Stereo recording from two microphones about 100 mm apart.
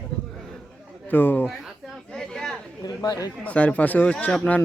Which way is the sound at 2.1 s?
5° left (ahead or behind).